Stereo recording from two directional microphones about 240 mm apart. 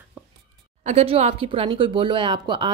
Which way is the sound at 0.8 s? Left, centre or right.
Right.